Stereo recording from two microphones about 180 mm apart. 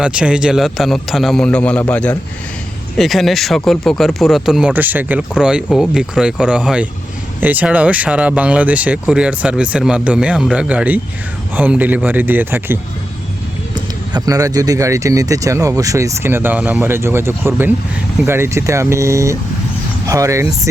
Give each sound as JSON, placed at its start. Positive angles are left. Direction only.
{"t": 0.0, "sound": "speech", "side_deg": -5}